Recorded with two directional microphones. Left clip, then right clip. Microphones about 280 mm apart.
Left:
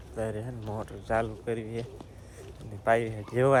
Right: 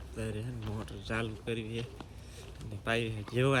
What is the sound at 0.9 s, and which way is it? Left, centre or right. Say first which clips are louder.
Speech: left 8 dB; centre.